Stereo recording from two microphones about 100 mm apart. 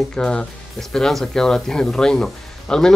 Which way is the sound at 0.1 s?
10° left (ahead or behind).